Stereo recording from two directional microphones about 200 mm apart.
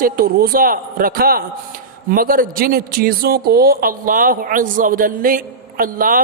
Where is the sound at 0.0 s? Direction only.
50° right (ahead or behind).